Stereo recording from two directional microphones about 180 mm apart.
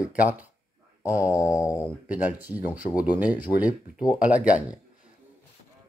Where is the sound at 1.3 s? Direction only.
20° left (ahead or behind).